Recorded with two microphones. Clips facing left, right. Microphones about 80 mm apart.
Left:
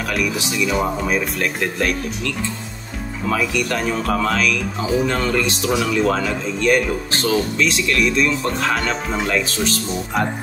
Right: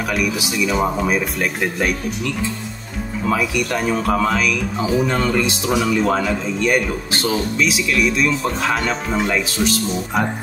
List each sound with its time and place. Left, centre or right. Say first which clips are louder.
0.1 s speech: even; centre